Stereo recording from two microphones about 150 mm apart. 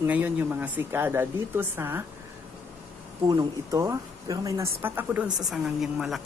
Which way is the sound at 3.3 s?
25° right (ahead or behind).